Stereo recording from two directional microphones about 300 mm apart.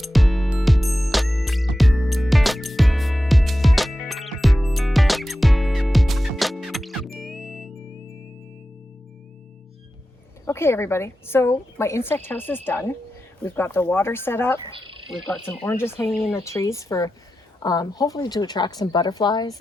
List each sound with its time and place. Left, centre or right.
0.0 s music: centre
10.4 s a woman's voice: centre
14.7 s speech: centre
15.4 s a woman's voice: centre